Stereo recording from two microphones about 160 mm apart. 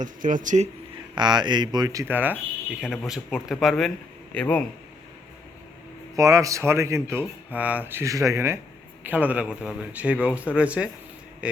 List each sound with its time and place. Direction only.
0.0 s speech: 55° right (ahead or behind)
1.1 s a man's voice: 25° right (ahead or behind); by 4.6 s 10° left (ahead or behind)
6.1 s speech: 20° right (ahead or behind)